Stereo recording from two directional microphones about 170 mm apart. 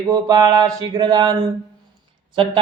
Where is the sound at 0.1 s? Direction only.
20° right (ahead or behind).